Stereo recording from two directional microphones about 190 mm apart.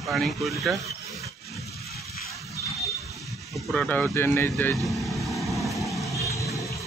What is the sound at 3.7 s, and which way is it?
Speech, 10° left (ahead or behind).